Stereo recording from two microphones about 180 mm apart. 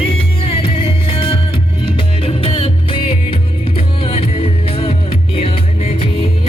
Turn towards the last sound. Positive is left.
turn(degrees=30)  # may be behind; listen again after turning